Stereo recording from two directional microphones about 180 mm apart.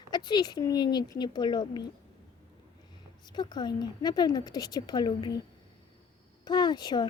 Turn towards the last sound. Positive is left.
turn(degrees=25)  # may be behind; listen again after turning